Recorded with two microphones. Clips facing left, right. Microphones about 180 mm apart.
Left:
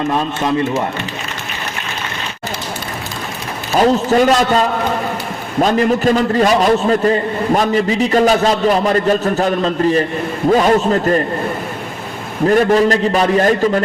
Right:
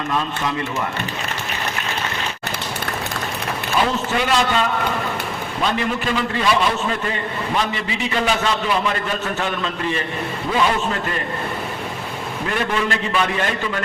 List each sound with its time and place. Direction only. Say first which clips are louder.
3.8 s a man's voice: left 9 dB; 40° left (ahead or behind)
12.5 s a man's voice: left 11 dB; 40° left (ahead or behind)